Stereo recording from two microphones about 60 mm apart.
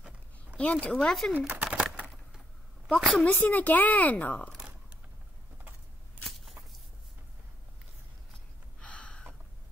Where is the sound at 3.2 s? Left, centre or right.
Left.